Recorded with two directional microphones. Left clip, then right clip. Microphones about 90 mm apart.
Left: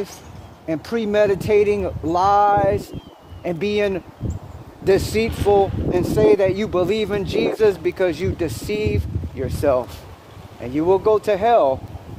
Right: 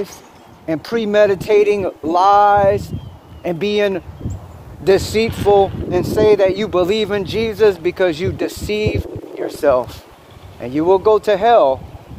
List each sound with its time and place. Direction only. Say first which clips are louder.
0.7 s speech: right 4 dB; 40° right (ahead or behind)
1.6 s speech: right 4 dB; 65° right (ahead or behind)
2.5 s speech: right 5 dB; 45° right (ahead or behind)
3.4 s speech: right 4 dB; 25° right (ahead or behind)
7.9 s speech: right 4 dB; 20° right (ahead or behind)
10.6 s speech: right 4 dB; 45° right (ahead or behind)
11.0 s speech: right 4 dB; 30° right (ahead or behind)
11.4 s speech: right 4 dB; 20° right (ahead or behind)